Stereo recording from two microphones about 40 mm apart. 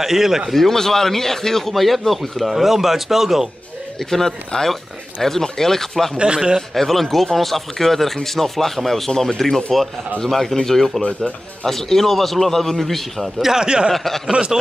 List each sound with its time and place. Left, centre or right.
0.0 s a man's voice: centre
0.5 s speech: centre
4.0 s speech: centre
6.1 s a man's voice: right
6.7 s speech: centre
13.4 s a man's voice: centre
13.9 s speech: centre
14.5 s a man's voice: centre